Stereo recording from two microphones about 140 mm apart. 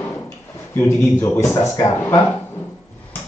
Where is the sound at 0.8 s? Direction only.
15° left (ahead or behind).